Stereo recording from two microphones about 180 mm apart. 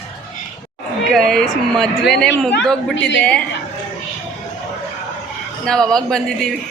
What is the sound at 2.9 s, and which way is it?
Speech, 85° left.